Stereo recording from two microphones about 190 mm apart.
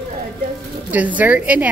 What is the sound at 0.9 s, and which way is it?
Speech, 10° right (ahead or behind).